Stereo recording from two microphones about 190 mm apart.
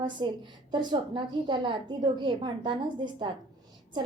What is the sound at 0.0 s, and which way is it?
A woman's voice, 25° right (ahead or behind).